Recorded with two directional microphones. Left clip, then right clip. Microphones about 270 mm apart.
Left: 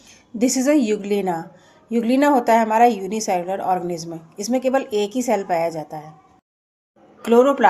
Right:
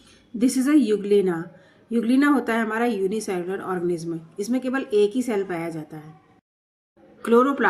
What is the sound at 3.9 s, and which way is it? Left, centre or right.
Speech, left.